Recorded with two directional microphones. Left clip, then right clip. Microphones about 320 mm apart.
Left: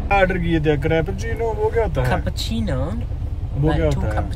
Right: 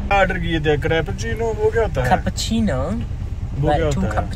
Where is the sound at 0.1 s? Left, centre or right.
Centre.